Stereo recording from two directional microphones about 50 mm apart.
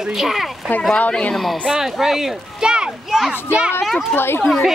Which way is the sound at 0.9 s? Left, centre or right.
Left.